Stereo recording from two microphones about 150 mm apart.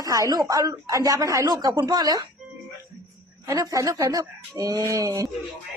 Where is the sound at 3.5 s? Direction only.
25° right (ahead or behind).